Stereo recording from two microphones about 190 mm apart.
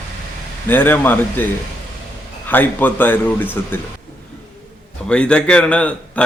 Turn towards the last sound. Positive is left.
turn(degrees=5)  # may be behind; listen again after turning